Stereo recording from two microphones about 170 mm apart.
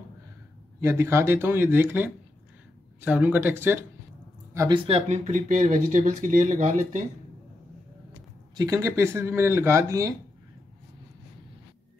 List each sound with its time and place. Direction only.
0.7 s speech: 15° right (ahead or behind)
4.6 s speech: 25° right (ahead or behind); by 7.0 s 50° right (ahead or behind)
8.5 s speech: 20° right (ahead or behind)